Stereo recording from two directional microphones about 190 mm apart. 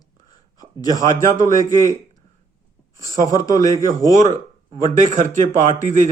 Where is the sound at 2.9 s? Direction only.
20° left (ahead or behind).